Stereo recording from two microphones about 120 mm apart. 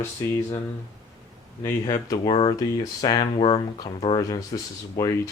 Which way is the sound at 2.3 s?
50° left (ahead or behind).